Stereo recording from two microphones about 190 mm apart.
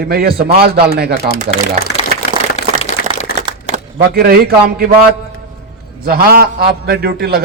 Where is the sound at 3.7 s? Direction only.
50° right (ahead or behind).